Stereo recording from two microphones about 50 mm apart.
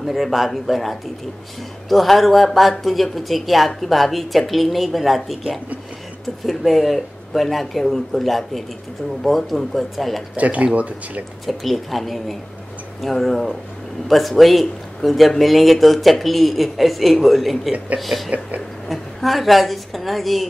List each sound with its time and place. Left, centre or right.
0.0 s speech: centre
10.3 s speech: right
11.4 s speech: centre